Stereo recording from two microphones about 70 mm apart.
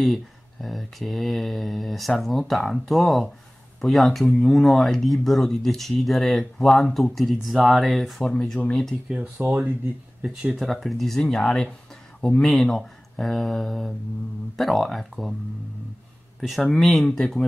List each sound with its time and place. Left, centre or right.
0.0 s speech: centre
8.2 s speech: centre
9.4 s speech: right
10.2 s speech: centre
12.4 s speech: centre
16.3 s speech: centre